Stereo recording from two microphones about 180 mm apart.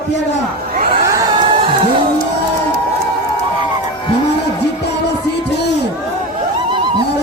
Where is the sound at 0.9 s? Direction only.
30° right (ahead or behind).